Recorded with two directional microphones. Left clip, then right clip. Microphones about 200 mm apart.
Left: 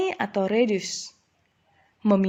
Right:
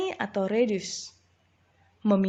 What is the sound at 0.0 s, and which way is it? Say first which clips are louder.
A woman's voice: left 4 dB; 35° left (ahead or behind).